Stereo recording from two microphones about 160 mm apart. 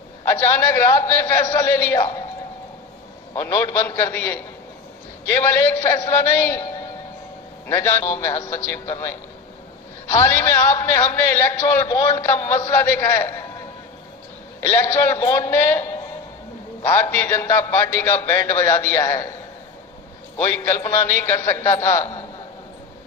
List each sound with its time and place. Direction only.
0.3 s a man's voice: 15° left (ahead or behind)
3.3 s a man's voice: 20° left (ahead or behind)
7.7 s a man's voice: 15° left (ahead or behind)
14.6 s a man's voice: 15° left (ahead or behind)
20.4 s a man's voice: 15° left (ahead or behind)